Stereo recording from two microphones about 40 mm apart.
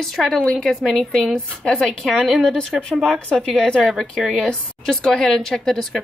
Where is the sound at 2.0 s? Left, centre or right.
Centre.